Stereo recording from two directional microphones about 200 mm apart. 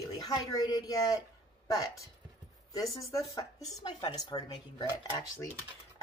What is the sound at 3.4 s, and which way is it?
Speech, 20° left (ahead or behind).